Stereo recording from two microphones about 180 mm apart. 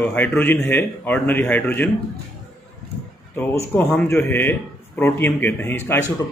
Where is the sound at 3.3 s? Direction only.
10° left (ahead or behind).